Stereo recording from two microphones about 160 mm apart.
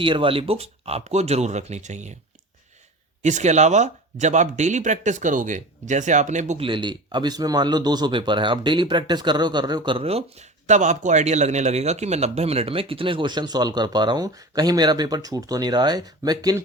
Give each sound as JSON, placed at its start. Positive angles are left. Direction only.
{"t": 0.0, "sound": "speech", "side_deg": -30}
{"t": 3.2, "sound": "speech", "side_deg": -50}
{"t": 6.6, "sound": "a man's voice", "side_deg": -30}